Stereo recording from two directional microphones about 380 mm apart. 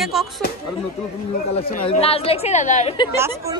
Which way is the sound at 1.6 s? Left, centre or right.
Centre.